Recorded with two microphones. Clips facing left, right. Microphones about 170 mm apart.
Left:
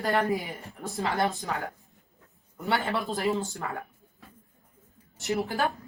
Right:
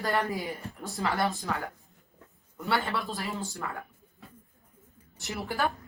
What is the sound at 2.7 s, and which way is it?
Speech, 20° left (ahead or behind).